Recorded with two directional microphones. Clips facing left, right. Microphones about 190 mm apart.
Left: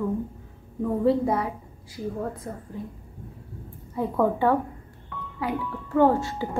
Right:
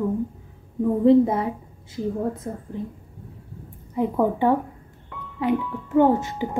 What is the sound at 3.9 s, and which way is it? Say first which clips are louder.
A woman's voice: right 2 dB; 15° right (ahead or behind).